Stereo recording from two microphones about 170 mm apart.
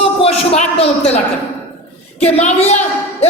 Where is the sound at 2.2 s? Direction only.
40° left (ahead or behind).